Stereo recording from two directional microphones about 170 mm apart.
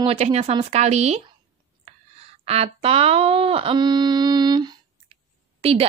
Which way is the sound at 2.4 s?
35° right (ahead or behind).